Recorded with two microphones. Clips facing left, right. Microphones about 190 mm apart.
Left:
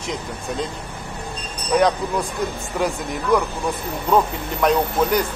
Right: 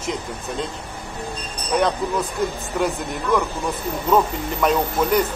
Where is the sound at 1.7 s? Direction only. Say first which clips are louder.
Left 2 dB; centre (ahead or behind).